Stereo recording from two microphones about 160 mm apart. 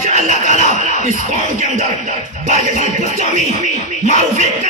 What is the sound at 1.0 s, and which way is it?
Speech, 50° right (ahead or behind).